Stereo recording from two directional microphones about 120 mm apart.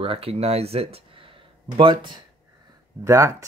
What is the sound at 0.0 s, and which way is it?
Speech, 55° right (ahead or behind).